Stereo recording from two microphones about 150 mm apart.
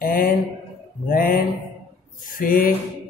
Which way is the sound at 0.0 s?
70° left (ahead or behind).